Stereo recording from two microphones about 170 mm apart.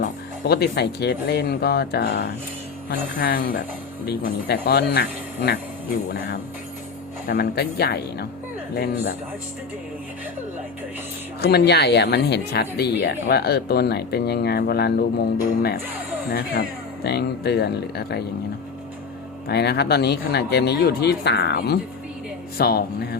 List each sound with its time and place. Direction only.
0.0 s speech: 70° left (ahead or behind)
7.3 s speech: 65° left (ahead or behind)
11.3 s speech: 70° left (ahead or behind)
19.5 s speech: 70° left (ahead or behind)